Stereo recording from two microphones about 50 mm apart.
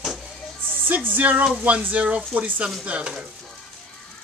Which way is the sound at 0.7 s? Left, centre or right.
Right.